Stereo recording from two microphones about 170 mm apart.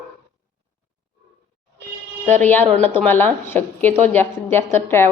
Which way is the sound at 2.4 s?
10° left (ahead or behind).